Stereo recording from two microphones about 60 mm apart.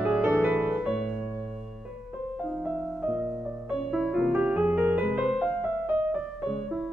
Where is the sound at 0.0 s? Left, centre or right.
Centre.